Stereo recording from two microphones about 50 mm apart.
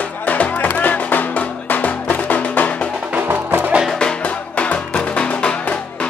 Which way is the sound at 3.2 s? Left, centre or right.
Right.